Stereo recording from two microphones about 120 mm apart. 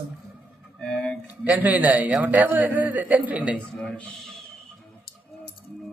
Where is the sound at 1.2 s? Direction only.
15° right (ahead or behind).